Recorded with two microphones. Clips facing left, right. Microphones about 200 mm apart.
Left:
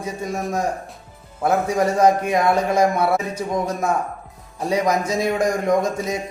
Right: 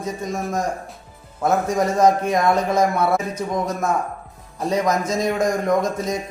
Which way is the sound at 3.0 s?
30° left (ahead or behind).